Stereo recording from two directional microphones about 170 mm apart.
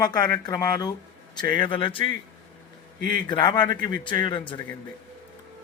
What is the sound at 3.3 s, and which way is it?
Speech, 25° left (ahead or behind).